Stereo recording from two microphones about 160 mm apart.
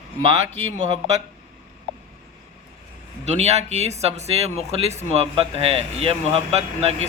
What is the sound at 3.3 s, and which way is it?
Speech, 45° right (ahead or behind).